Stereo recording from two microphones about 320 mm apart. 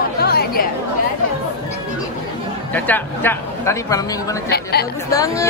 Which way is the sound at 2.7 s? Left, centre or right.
Centre.